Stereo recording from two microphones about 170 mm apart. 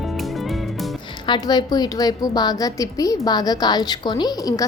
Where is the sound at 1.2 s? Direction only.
25° left (ahead or behind).